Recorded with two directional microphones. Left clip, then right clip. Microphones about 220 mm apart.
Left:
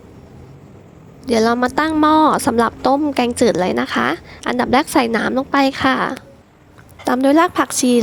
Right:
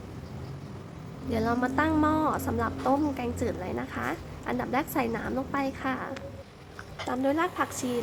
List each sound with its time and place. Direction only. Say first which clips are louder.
1.3 s a woman's voice: left 13 dB; 35° left (ahead or behind)